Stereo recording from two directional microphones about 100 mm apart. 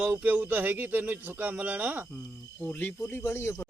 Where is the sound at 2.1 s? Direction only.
10° left (ahead or behind).